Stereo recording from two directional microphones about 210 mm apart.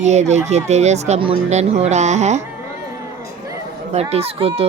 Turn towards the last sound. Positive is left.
turn(degrees=-30)  # may be behind; listen again after turning